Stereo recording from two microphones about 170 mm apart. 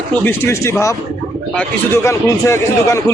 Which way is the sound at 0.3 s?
15° left (ahead or behind).